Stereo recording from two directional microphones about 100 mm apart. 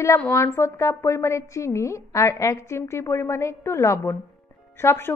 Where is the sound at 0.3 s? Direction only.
25° left (ahead or behind).